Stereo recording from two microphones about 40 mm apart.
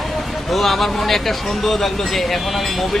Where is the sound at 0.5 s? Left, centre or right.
Centre.